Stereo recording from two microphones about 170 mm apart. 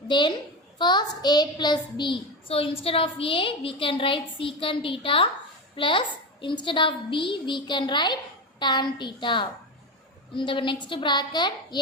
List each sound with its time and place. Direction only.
0.1 s a woman's voice: 25° left (ahead or behind)